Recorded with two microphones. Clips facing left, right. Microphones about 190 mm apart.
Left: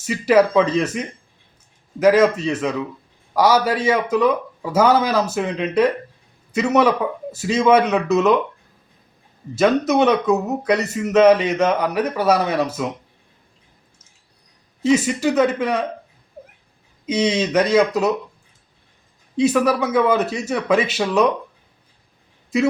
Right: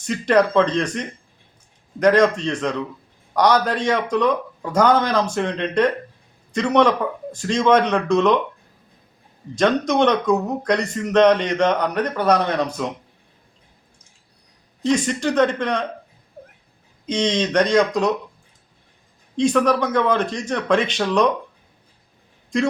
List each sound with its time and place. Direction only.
0.0 s speech: 5° left (ahead or behind)
9.6 s speech: 5° left (ahead or behind)
14.8 s speech: 5° left (ahead or behind)
17.1 s speech: 5° left (ahead or behind)
19.4 s speech: 5° left (ahead or behind)
22.5 s speech: 5° left (ahead or behind)